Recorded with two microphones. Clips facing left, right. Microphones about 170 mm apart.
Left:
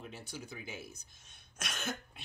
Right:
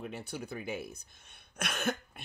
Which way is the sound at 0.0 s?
60° right (ahead or behind).